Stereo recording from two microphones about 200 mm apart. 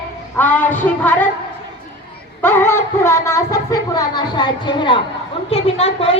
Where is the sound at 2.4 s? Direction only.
10° left (ahead or behind).